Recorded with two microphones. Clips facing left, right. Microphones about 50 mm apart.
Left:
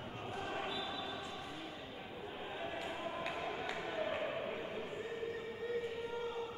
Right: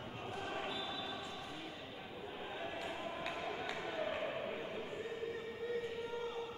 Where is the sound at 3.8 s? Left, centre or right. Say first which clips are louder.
Left 2 dB; centre.